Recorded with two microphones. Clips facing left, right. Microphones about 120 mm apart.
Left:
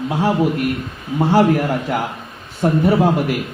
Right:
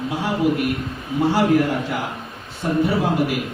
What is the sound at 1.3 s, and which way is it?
Speech, 45° left (ahead or behind).